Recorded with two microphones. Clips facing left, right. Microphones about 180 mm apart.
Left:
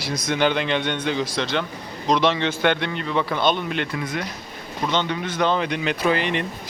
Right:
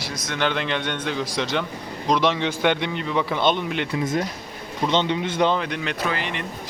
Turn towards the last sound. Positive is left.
turn(degrees=20)  # may be behind; listen again after turning